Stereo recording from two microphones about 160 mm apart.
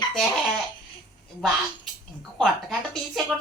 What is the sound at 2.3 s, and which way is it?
Speech, centre (ahead or behind).